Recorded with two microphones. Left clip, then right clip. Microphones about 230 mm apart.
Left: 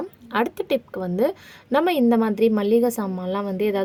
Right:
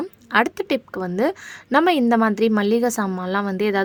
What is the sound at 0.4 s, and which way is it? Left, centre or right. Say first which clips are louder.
Speech: right 1 dB; right.